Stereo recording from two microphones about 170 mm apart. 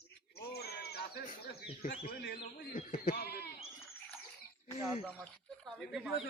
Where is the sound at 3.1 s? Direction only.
70° left (ahead or behind).